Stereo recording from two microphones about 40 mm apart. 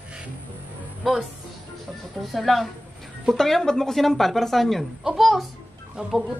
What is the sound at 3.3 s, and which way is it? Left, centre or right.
A woman's voice, centre.